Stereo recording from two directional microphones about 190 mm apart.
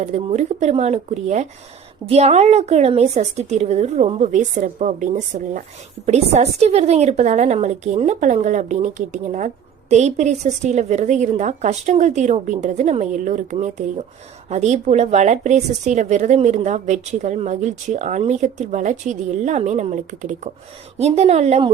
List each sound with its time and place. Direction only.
0.0 s a woman's voice: 35° right (ahead or behind)